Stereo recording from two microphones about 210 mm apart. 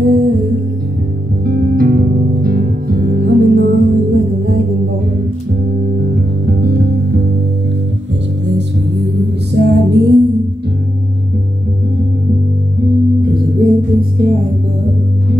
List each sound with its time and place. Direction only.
0.0 s music: 40° right (ahead or behind)
6.1 s music: 45° right (ahead or behind)
8.5 s music: 55° right (ahead or behind)
13.2 s music: 45° right (ahead or behind)